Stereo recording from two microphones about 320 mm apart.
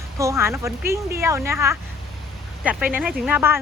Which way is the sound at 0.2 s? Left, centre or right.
Centre.